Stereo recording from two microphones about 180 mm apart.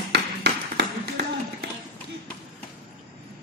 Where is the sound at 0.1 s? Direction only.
65° right (ahead or behind).